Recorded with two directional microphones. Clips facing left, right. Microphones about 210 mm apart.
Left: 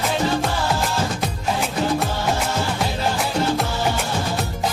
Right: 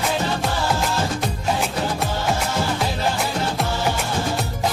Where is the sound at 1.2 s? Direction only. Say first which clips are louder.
Even; centre (ahead or behind).